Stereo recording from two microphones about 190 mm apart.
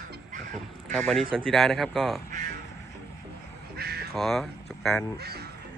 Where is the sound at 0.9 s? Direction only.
Centre (ahead or behind).